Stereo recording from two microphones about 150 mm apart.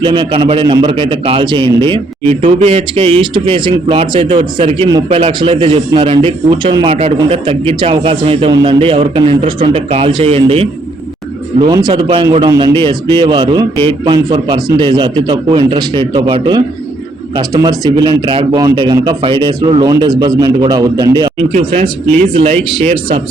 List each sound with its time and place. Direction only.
0.0 s a man's voice: 30° right (ahead or behind)
2.4 s a man's voice: 45° right (ahead or behind)
11.7 s a man's voice: 30° right (ahead or behind)
22.4 s a man's voice: 40° right (ahead or behind)